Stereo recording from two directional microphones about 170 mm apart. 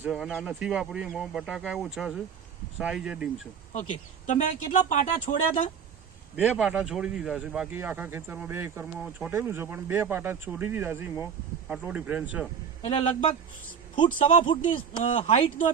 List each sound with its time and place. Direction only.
0.0 s speech: 5° right (ahead or behind)
4.3 s speech: 45° left (ahead or behind)
6.3 s speech: 5° right (ahead or behind)
12.8 s a man's voice: 35° left (ahead or behind)
14.9 s speech: 45° left (ahead or behind)